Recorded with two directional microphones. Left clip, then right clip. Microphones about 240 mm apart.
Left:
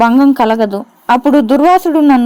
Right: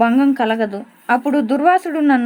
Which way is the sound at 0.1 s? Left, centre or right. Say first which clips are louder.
Left 6 dB; left.